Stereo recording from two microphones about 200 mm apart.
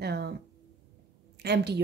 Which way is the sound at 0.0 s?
55° right (ahead or behind).